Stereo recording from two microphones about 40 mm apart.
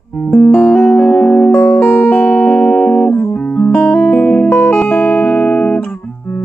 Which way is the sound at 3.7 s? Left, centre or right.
Left.